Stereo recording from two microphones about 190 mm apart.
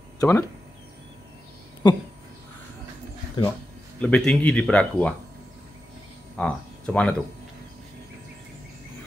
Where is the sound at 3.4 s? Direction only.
25° left (ahead or behind).